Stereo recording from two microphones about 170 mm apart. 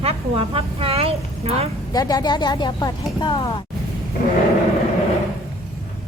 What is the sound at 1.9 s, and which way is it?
Speech, 20° left (ahead or behind).